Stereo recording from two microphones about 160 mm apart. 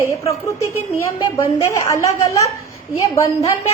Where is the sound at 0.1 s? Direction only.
20° left (ahead or behind).